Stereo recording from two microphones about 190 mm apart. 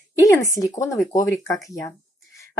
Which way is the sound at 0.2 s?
15° left (ahead or behind).